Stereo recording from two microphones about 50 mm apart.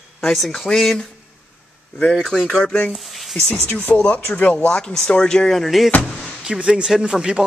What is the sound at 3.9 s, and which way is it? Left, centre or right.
Speech, left.